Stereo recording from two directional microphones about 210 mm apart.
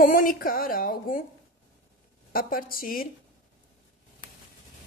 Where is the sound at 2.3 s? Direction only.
40° left (ahead or behind).